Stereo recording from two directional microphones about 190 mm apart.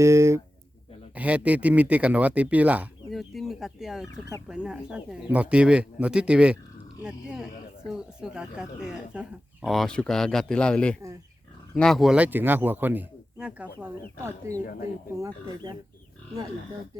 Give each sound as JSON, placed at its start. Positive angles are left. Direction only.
{"t": 0.0, "sound": "speech", "side_deg": -15}
{"t": 14.6, "sound": "speech", "side_deg": 50}
{"t": 15.1, "sound": "speech", "side_deg": -20}